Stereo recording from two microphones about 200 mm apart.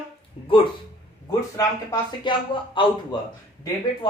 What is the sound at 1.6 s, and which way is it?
Speech, 20° left (ahead or behind).